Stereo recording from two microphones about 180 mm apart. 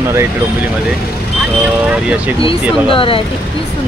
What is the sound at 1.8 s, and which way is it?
Speech, 5° right (ahead or behind).